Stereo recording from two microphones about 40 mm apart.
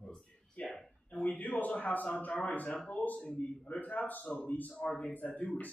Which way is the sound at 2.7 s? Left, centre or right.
Left.